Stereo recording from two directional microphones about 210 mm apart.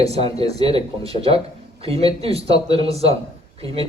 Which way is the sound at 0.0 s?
30° right (ahead or behind).